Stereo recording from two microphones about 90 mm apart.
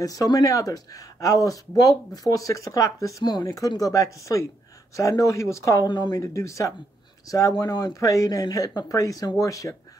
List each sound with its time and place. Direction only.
0.0 s speech: 40° left (ahead or behind)
5.9 s speech: 55° left (ahead or behind)
6.2 s speech: 35° left (ahead or behind)